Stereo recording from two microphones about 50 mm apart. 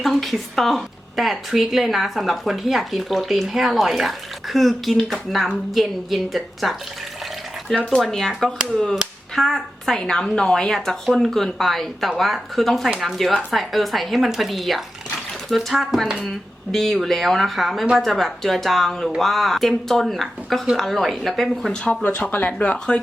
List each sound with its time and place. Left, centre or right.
0.0 s a woman's voice: centre
8.0 s a woman's voice: centre
16.7 s a woman's voice: centre
22.0 s speech: left